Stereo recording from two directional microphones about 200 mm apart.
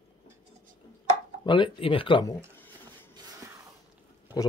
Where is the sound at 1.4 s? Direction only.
25° left (ahead or behind).